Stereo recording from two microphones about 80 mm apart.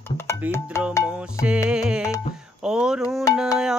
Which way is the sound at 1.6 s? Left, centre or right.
Centre.